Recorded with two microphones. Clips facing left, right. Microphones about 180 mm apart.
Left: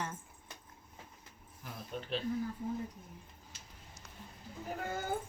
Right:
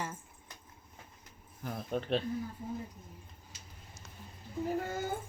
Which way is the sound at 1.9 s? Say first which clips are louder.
Right 8 dB; 50° right (ahead or behind).